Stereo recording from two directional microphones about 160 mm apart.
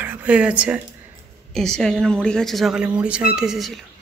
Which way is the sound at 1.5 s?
5° left (ahead or behind).